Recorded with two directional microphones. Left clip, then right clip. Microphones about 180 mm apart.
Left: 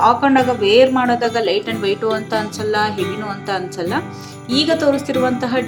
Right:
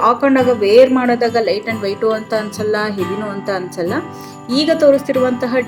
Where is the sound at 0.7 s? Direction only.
5° right (ahead or behind).